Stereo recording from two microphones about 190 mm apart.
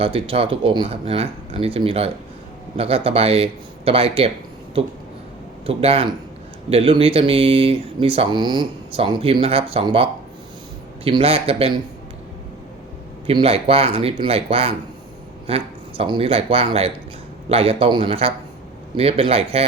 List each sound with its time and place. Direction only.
0.0 s speech: 30° right (ahead or behind)
5.6 s speech: 30° right (ahead or behind)
13.2 s speech: 30° right (ahead or behind)